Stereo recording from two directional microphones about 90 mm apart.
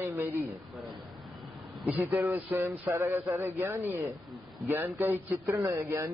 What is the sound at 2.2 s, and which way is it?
Speech, 20° right (ahead or behind).